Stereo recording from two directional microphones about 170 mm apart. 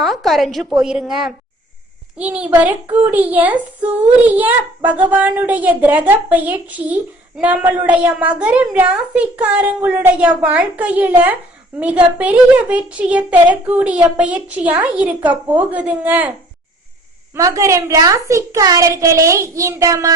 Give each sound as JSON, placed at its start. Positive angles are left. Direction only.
{"t": 0.0, "sound": "a woman's voice", "side_deg": 0}
{"t": 17.3, "sound": "a child's voice", "side_deg": -20}